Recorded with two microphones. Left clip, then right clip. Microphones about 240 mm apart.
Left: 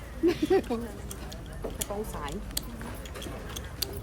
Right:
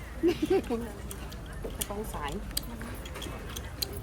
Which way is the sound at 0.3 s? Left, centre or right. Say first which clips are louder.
Left 2 dB; centre.